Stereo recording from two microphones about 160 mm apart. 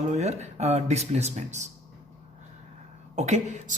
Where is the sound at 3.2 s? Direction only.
45° right (ahead or behind).